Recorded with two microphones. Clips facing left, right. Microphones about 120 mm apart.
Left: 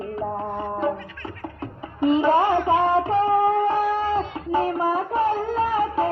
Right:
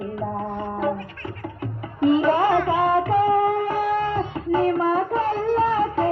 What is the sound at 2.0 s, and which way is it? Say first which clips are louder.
Music: even; 20° left (ahead or behind).